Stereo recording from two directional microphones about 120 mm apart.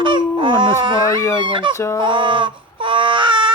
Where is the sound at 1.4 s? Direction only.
45° right (ahead or behind).